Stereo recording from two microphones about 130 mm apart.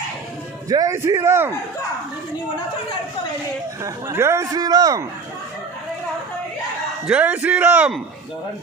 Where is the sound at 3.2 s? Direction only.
35° left (ahead or behind).